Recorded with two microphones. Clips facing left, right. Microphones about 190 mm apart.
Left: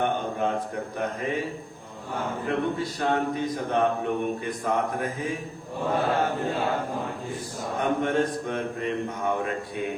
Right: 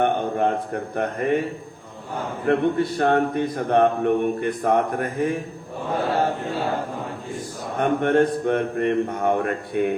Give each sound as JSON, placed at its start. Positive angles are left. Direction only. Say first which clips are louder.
{"t": 0.0, "sound": "a man's voice", "louder": "right 5 dB", "side_deg": -55}
{"t": 2.5, "sound": "a man's voice", "louder": "right 9 dB", "side_deg": -60}
{"t": 7.8, "sound": "a man's voice", "louder": "right 6 dB", "side_deg": -60}